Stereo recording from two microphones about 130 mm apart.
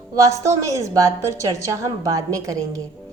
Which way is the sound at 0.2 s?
25° right (ahead or behind).